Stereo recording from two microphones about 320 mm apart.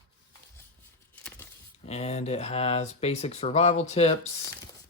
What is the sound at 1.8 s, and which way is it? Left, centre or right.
Speech, centre.